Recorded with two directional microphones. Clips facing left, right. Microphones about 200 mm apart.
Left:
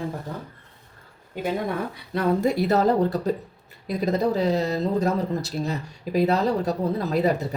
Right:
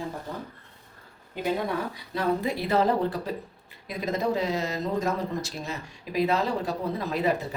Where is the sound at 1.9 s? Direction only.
50° left (ahead or behind).